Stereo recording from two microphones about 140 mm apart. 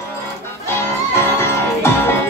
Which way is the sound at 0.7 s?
20° left (ahead or behind).